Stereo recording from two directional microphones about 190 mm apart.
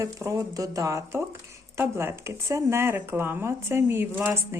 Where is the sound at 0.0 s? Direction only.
15° right (ahead or behind).